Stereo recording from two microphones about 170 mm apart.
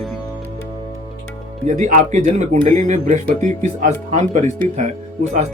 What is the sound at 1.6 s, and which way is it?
Speech, 45° right (ahead or behind).